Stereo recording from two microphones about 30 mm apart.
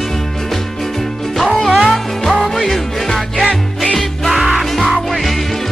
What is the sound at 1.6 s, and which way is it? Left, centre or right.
Music, centre.